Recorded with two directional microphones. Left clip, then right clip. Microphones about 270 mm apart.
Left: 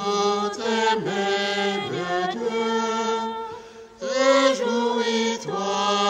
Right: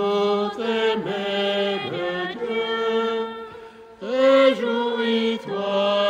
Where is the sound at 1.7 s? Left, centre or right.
Centre.